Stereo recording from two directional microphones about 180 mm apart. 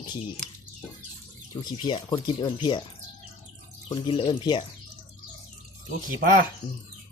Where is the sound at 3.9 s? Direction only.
30° left (ahead or behind).